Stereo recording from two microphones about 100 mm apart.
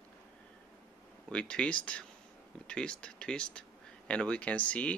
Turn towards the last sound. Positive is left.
turn(degrees=15)  # may be behind; listen again after turning